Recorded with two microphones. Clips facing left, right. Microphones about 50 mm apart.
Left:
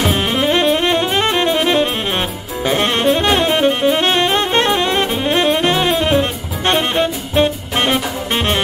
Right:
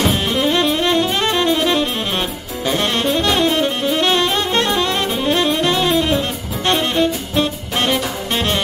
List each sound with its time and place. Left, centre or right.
0.0 s saxophone: left